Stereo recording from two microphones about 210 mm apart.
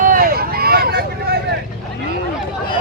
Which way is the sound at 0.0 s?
40° right (ahead or behind).